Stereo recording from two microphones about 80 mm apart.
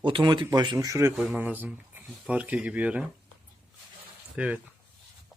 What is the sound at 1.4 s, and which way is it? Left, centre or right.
Speech, right.